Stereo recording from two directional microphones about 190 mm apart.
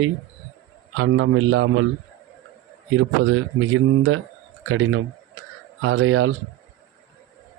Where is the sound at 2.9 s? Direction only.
90° right.